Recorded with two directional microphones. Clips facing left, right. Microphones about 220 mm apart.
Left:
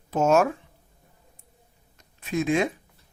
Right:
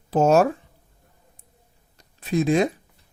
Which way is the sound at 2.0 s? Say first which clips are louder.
Right 4 dB; 35° right (ahead or behind).